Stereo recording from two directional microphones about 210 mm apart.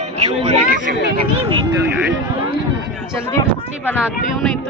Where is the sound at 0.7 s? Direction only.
45° right (ahead or behind).